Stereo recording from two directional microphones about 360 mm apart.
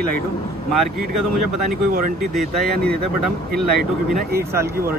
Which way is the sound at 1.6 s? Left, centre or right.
Right.